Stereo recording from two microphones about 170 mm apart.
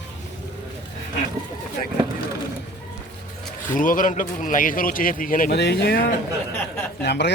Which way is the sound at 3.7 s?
50° left (ahead or behind).